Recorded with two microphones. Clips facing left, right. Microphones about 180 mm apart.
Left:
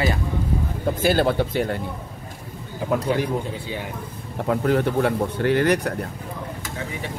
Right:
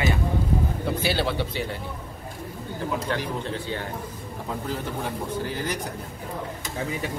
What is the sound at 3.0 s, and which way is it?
Speech, 10° left (ahead or behind).